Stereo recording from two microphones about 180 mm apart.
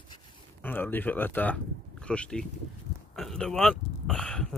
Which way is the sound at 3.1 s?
5° left (ahead or behind).